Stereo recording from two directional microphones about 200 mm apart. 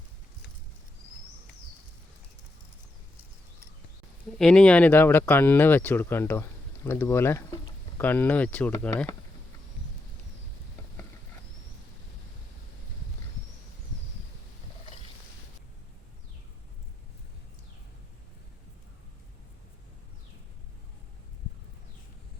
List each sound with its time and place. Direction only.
4.4 s speech: 5° left (ahead or behind)